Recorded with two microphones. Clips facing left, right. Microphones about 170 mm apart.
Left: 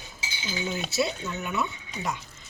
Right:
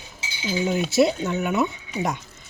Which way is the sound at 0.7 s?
55° right (ahead or behind).